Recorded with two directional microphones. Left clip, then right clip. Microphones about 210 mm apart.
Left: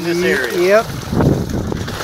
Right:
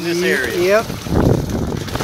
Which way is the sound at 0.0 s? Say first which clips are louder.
Left 1 dB; 35° right (ahead or behind).